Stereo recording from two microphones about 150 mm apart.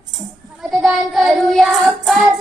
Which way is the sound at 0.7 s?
Centre (ahead or behind).